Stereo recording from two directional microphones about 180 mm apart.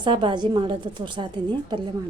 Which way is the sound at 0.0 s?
25° right (ahead or behind).